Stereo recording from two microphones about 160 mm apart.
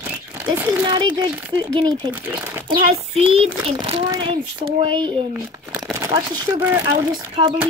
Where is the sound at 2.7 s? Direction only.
35° right (ahead or behind).